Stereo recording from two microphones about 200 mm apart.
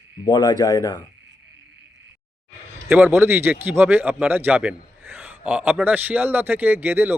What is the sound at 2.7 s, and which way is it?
A man's voice, 10° right (ahead or behind).